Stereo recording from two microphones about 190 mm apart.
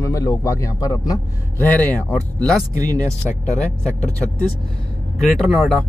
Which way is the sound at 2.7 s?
20° right (ahead or behind).